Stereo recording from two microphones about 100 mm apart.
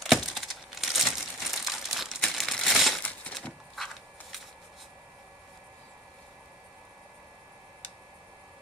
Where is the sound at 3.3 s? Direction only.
5° left (ahead or behind).